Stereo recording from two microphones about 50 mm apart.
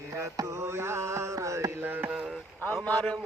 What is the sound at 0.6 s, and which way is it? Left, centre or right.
Mantra, right.